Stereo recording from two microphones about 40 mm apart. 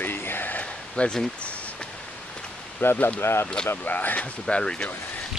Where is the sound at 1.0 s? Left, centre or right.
Left.